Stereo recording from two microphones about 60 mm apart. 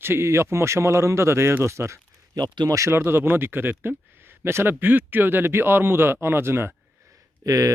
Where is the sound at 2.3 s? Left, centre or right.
Right.